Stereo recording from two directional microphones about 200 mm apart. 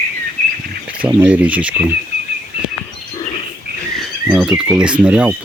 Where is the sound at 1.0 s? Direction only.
10° right (ahead or behind).